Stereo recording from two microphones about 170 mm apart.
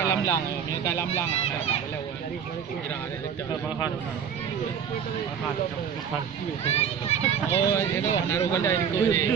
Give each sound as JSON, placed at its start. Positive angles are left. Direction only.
{"t": 0.0, "sound": "speech", "side_deg": 20}
{"t": 6.7, "sound": "a child's voice", "side_deg": 40}
{"t": 7.5, "sound": "speech", "side_deg": 15}